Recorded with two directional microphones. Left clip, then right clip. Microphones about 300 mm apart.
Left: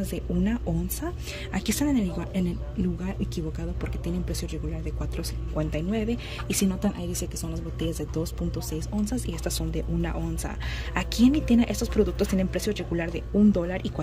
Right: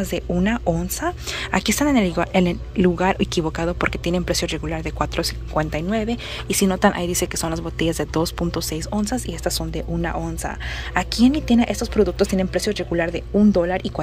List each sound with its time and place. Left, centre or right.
0.1 s speech: centre